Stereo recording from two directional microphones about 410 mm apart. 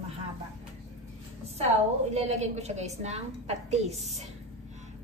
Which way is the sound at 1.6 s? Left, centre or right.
Centre.